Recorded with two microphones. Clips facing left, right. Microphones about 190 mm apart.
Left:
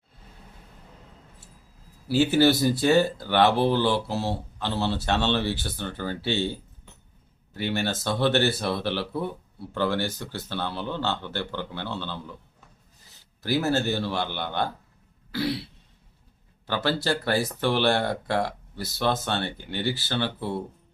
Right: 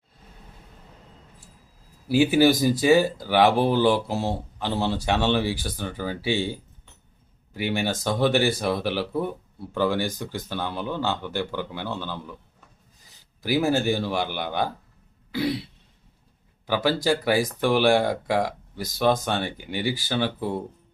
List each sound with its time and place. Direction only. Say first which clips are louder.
2.0 s speech: right 2 dB; 10° right (ahead or behind)
13.4 s speech: right 2 dB; 10° right (ahead or behind)
15.3 s throat clearing: right 2 dB; 15° right (ahead or behind)
16.6 s speech: right 3 dB; 10° right (ahead or behind)